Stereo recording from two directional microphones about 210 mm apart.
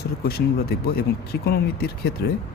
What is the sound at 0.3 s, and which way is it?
Speech, 50° left (ahead or behind).